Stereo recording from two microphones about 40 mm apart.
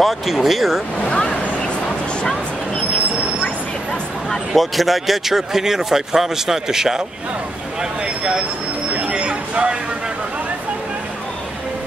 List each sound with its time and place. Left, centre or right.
0.0 s speech: centre
1.0 s vehicle: left
4.6 s speech: centre
9.0 s a sound: right